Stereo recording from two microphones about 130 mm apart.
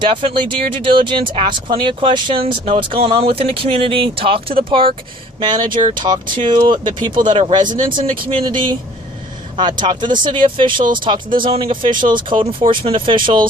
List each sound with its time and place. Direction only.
0.1 s speech: 40° right (ahead or behind)